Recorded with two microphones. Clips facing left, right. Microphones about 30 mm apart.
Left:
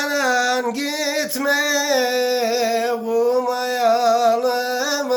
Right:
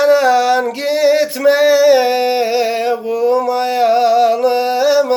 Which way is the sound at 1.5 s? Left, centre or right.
Right.